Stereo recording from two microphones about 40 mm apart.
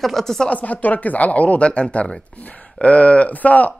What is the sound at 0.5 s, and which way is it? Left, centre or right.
A man's voice, left.